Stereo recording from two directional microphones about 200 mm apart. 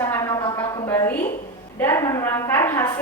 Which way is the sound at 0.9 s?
10° left (ahead or behind).